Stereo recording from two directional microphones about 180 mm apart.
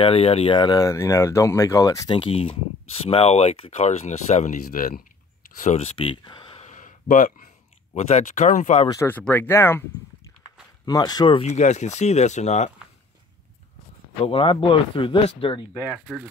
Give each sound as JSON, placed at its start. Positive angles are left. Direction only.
{"t": 0.0, "sound": "speech", "side_deg": 35}
{"t": 2.1, "sound": "speech", "side_deg": 30}
{"t": 4.6, "sound": "speech", "side_deg": 55}
{"t": 5.6, "sound": "speech", "side_deg": 40}
{"t": 6.6, "sound": "a sound", "side_deg": 45}
{"t": 7.9, "sound": "speech", "side_deg": 40}
{"t": 8.8, "sound": "speech", "side_deg": 15}
{"t": 10.9, "sound": "speech", "side_deg": 20}
{"t": 14.2, "sound": "speech", "side_deg": 30}
{"t": 15.8, "sound": "speech", "side_deg": -5}